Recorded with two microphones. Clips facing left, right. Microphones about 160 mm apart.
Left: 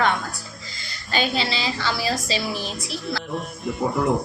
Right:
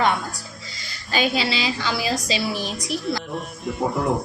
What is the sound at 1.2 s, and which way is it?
A woman's voice, 10° right (ahead or behind).